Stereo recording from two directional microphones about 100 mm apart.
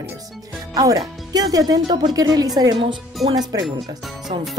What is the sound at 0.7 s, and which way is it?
Speech, 40° right (ahead or behind).